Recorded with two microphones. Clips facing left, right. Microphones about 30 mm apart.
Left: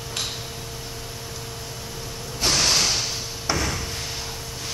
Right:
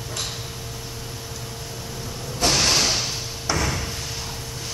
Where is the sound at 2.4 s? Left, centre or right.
Centre.